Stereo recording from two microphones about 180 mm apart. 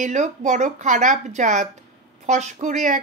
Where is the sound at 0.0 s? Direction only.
40° right (ahead or behind).